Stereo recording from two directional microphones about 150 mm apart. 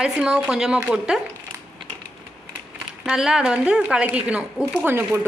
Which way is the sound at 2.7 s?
5° right (ahead or behind).